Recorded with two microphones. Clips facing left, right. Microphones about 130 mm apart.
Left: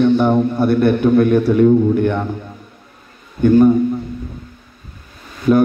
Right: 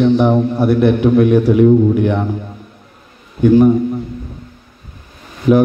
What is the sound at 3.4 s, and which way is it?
Speech, 10° right (ahead or behind).